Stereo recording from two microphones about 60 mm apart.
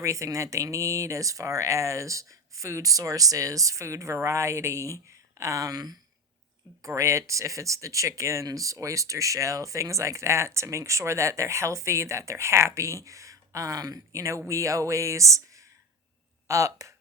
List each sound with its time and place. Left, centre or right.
0.0 s speech: right
6.8 s speech: right